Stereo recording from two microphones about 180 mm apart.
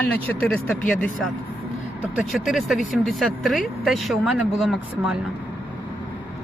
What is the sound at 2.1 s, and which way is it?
Speech, centre (ahead or behind).